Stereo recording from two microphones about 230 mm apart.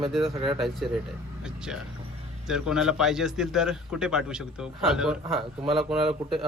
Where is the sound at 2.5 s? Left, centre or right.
Centre.